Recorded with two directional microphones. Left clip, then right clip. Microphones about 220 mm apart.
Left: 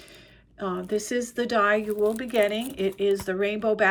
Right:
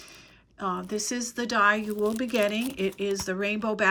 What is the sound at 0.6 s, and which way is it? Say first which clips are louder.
Speech: left 2 dB; 10° right (ahead or behind).